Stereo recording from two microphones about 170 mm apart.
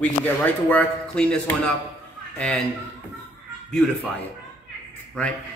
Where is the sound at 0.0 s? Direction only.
10° left (ahead or behind).